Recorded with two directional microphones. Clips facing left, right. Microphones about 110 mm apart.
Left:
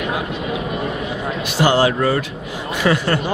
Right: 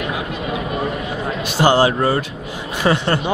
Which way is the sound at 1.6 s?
30° right (ahead or behind).